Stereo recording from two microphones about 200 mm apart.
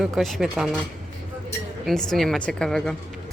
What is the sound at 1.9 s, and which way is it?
Speech, centre (ahead or behind).